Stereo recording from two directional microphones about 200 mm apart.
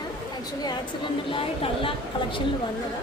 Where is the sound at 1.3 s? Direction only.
25° left (ahead or behind).